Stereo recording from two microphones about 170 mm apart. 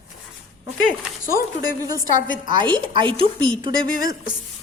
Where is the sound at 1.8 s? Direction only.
20° right (ahead or behind).